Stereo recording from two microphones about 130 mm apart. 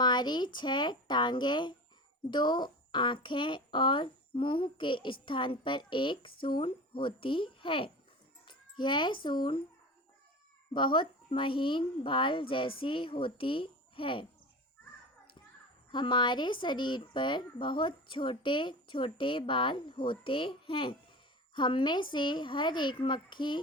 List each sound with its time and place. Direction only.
0.0 s speech: 35° left (ahead or behind)
10.8 s speech: 40° left (ahead or behind)
15.9 s speech: 35° left (ahead or behind)